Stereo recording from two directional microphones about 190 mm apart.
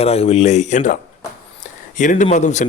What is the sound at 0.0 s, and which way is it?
Speech, 30° left (ahead or behind).